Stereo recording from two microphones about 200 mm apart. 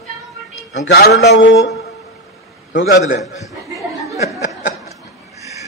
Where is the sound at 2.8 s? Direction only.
55° left (ahead or behind).